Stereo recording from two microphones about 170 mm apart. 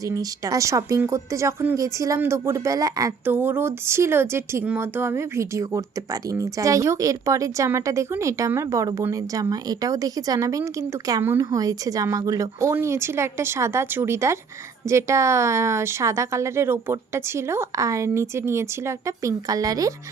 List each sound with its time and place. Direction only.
0.0 s speech: 20° right (ahead or behind)